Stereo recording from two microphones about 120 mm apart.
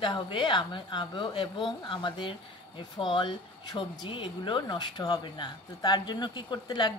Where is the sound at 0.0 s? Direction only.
40° left (ahead or behind).